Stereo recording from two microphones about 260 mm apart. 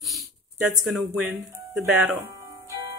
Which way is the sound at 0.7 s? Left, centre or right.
Centre.